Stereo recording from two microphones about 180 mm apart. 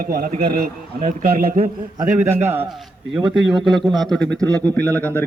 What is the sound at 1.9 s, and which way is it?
A man's voice, 15° right (ahead or behind).